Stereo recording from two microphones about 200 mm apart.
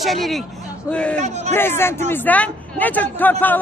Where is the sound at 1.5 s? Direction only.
10° left (ahead or behind).